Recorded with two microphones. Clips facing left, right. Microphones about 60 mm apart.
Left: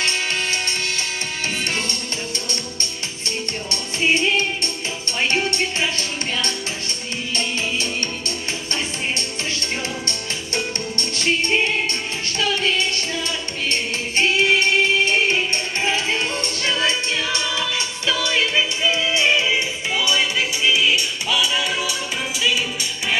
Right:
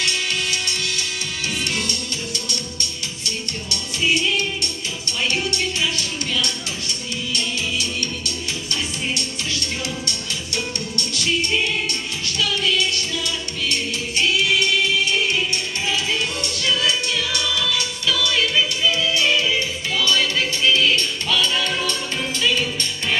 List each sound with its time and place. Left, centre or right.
0.0 s music: left
4.0 s music: left
10.0 s music: left; by 22.8 s centre